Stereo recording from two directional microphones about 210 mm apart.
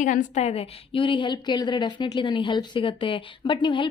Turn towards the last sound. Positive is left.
turn(degrees=25)  # may be behind; listen again after turning